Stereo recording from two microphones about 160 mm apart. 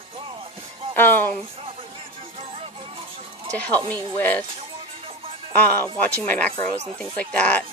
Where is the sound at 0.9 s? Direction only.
10° left (ahead or behind).